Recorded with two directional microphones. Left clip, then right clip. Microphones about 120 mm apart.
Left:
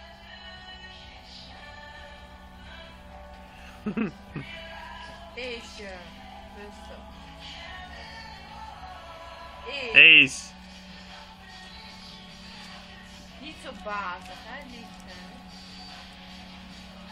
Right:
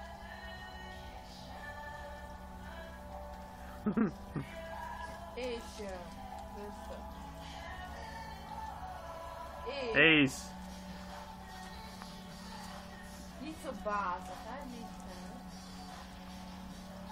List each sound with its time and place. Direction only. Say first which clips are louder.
3.8 s speech: left 3 dB; 20° left (ahead or behind)
5.3 s speech: left 5 dB; 20° right (ahead or behind)
9.7 s speech: left 5 dB; 20° right (ahead or behind)
9.9 s speech: left 12 dB; 15° left (ahead or behind)
13.8 s speech: left 3 dB; 15° right (ahead or behind)